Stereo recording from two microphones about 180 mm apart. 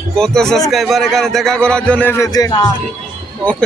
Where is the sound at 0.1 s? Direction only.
5° left (ahead or behind); by 2.7 s 20° left (ahead or behind).